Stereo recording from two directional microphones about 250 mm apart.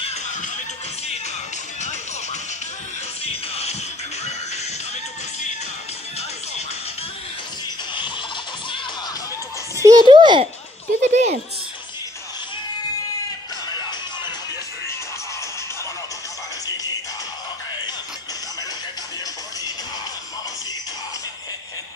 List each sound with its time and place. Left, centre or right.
0.0 s music: left
3.3 s music: left
9.8 s a sound: centre